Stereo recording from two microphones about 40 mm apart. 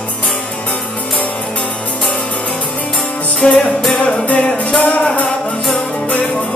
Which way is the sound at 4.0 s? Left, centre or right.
Left.